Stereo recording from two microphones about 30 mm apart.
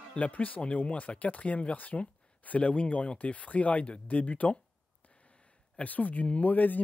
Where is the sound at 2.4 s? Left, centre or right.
Left.